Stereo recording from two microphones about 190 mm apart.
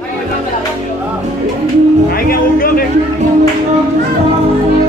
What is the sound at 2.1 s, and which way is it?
Speech, 50° left (ahead or behind).